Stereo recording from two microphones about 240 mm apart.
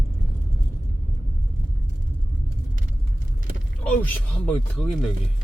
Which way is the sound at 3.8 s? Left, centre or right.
Centre.